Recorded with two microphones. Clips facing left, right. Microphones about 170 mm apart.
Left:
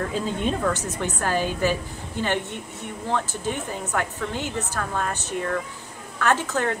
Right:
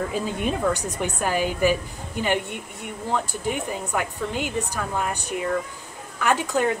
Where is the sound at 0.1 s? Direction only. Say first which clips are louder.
Even; 10° right (ahead or behind).